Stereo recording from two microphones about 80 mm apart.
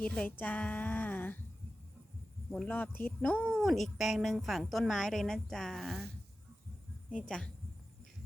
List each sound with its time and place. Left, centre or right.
0.0 s a woman's voice: centre
2.6 s speech: left
3.6 s a woman's voice: centre
7.1 s speech: centre